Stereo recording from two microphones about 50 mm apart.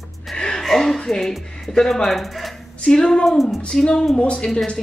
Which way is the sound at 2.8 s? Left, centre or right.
Centre.